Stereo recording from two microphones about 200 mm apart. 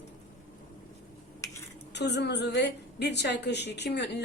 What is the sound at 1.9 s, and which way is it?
A woman's voice, 60° left (ahead or behind).